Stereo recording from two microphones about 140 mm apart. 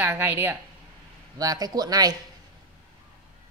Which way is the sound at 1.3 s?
25° right (ahead or behind).